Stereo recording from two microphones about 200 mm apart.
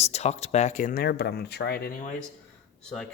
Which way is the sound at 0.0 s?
30° left (ahead or behind).